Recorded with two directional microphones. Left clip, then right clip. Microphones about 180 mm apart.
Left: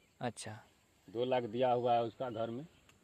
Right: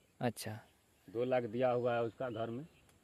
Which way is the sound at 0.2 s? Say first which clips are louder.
Right 2 dB; 40° right (ahead or behind).